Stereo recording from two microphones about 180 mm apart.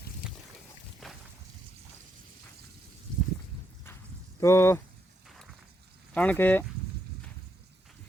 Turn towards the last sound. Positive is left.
turn(degrees=10)  # may be behind; listen again after turning